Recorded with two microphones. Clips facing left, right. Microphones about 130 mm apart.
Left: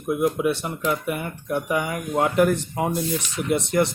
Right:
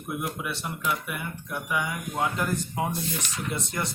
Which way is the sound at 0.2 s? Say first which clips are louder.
Left 11 dB; 50° left (ahead or behind).